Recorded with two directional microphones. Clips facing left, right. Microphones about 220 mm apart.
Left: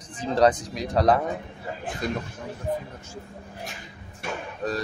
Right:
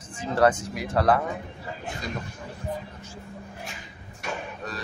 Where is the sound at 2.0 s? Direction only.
55° left (ahead or behind).